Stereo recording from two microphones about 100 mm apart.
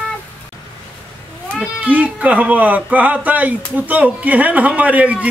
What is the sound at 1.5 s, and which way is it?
Speech, 15° right (ahead or behind).